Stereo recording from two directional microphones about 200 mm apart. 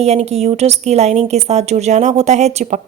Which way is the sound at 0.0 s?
30° right (ahead or behind).